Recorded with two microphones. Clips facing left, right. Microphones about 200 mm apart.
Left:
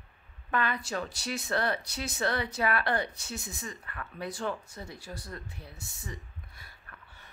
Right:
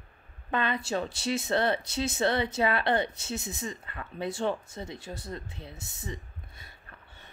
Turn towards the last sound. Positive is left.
turn(degrees=-25)  # may be behind; listen again after turning